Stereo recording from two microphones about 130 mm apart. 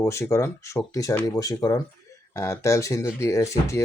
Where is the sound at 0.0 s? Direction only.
20° left (ahead or behind).